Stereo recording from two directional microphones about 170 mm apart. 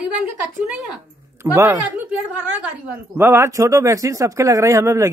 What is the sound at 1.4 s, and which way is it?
Speech, 15° right (ahead or behind).